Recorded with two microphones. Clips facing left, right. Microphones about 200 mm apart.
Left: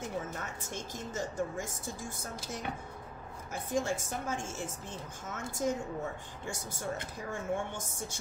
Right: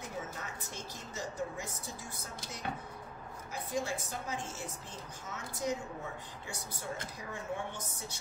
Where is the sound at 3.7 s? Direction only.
50° left (ahead or behind).